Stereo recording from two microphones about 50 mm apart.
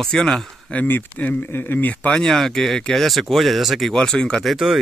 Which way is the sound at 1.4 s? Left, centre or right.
Left.